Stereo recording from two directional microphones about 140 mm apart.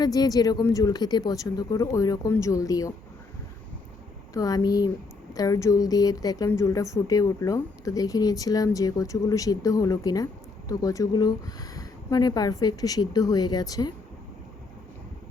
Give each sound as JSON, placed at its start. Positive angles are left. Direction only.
{"t": 0.0, "sound": "speech", "side_deg": 25}
{"t": 4.4, "sound": "speech", "side_deg": 25}